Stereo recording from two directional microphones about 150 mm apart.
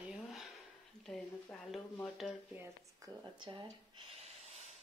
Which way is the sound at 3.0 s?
20° right (ahead or behind).